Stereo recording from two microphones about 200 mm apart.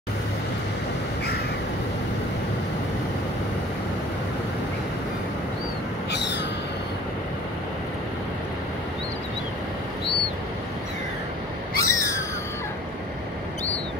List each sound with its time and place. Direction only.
6.1 s crow: 60° left (ahead or behind)
11.8 s owl: 15° left (ahead or behind)